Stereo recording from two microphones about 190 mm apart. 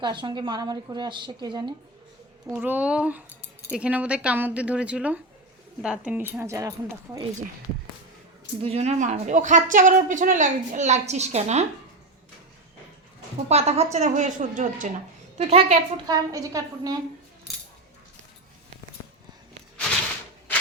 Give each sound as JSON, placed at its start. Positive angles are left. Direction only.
{"t": 0.0, "sound": "a woman's voice", "side_deg": -25}
{"t": 2.5, "sound": "speech", "side_deg": -10}
{"t": 8.6, "sound": "speech", "side_deg": -35}
{"t": 13.5, "sound": "speech", "side_deg": -35}
{"t": 16.0, "sound": "a woman's voice", "side_deg": -20}